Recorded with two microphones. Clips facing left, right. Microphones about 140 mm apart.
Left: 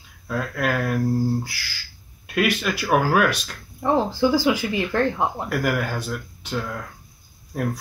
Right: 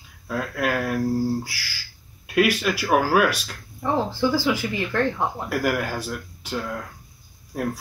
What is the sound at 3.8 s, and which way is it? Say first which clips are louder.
Speech: left 3 dB; 15° left (ahead or behind).